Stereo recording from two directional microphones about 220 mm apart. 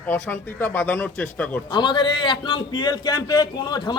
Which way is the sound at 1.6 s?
20° left (ahead or behind).